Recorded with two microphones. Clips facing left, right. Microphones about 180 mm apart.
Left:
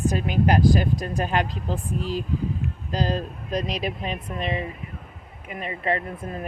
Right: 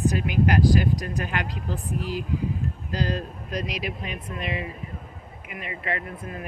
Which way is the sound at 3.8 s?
30° left (ahead or behind).